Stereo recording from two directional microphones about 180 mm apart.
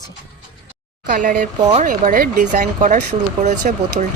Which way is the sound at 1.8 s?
45° right (ahead or behind).